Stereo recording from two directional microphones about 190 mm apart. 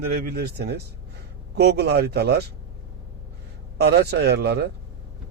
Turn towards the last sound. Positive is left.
turn(degrees=-60)  # may be behind; listen again after turning